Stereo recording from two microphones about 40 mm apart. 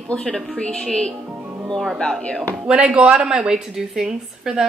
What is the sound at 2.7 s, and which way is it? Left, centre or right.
Speech, right.